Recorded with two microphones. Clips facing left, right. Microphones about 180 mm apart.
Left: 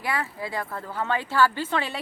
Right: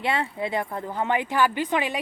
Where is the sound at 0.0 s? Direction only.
25° right (ahead or behind).